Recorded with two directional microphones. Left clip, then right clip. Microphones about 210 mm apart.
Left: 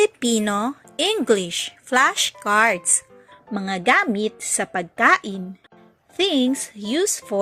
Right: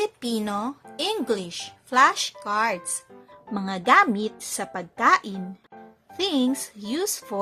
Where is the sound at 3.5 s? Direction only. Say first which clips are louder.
Even; 10° left (ahead or behind).